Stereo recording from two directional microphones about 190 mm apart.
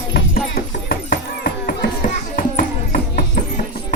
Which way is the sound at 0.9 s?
50° left (ahead or behind).